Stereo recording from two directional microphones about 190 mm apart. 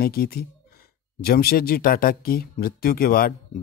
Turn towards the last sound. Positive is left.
turn(degrees=50)  # may be behind; listen again after turning